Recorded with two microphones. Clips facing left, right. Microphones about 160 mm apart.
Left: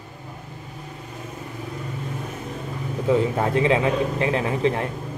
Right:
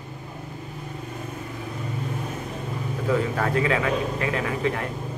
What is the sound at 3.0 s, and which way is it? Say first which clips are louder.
A man's voice: left 4 dB; 25° left (ahead or behind).